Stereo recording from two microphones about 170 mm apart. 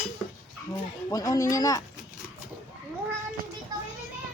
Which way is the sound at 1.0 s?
20° left (ahead or behind).